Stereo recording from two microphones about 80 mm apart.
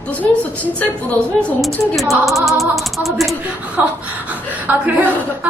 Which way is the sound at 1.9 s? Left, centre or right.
Centre.